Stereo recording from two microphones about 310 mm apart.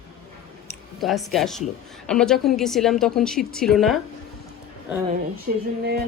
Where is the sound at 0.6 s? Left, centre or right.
Centre.